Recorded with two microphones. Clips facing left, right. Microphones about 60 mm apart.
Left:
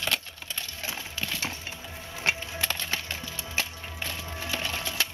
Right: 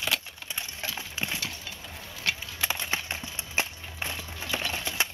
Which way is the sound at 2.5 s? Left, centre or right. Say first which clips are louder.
Even; centre.